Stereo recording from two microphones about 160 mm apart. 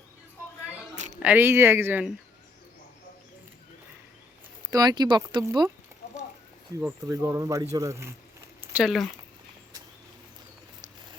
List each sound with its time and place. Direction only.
1.2 s speech: 10° right (ahead or behind)
4.7 s speech: 25° right (ahead or behind)
6.0 s clip-clop: 60° left (ahead or behind)
6.7 s speech: 20° right (ahead or behind)
8.7 s speech: centre (ahead or behind)